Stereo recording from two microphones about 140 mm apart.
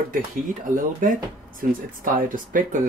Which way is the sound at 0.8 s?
75° right (ahead or behind).